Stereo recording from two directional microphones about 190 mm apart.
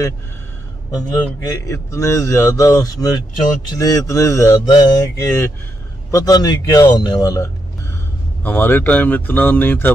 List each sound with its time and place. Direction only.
0.9 s speech: 15° left (ahead or behind)